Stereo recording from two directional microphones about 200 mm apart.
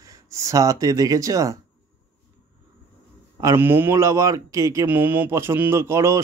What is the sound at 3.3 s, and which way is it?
Speech, 15° right (ahead or behind).